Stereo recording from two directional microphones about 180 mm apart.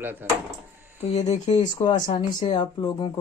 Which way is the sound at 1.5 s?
25° left (ahead or behind).